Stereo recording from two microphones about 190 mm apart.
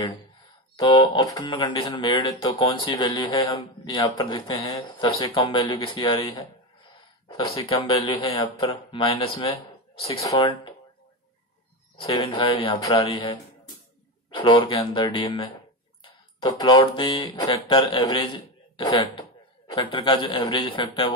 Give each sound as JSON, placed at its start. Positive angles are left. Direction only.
{"t": 0.7, "sound": "speech", "side_deg": 25}
{"t": 12.0, "sound": "speech", "side_deg": 25}